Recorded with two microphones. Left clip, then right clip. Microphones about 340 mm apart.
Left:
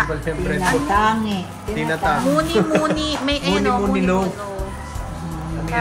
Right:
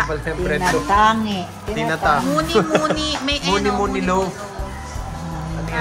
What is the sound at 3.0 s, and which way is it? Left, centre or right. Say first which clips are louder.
Speech: even; centre.